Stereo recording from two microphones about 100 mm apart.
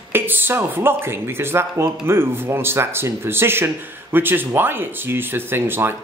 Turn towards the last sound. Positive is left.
turn(degrees=-20)  # may be behind; listen again after turning